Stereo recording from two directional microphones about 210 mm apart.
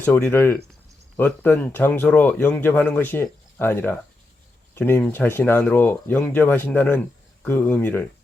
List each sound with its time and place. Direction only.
0.0 s speech: 10° left (ahead or behind)